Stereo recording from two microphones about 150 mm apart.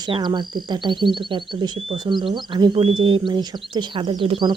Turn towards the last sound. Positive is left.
turn(degrees=-30)  # may be behind; listen again after turning